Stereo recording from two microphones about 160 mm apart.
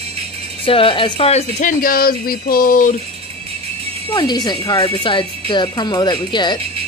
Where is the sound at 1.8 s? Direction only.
65° left (ahead or behind).